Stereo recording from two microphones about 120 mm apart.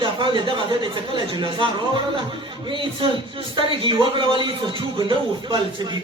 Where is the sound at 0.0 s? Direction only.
40° right (ahead or behind).